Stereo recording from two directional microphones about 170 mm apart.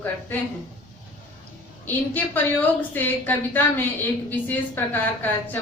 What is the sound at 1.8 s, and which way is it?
A woman's voice, 10° left (ahead or behind).